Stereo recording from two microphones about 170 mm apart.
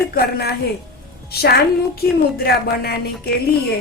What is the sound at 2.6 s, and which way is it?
Speech, 65° left (ahead or behind).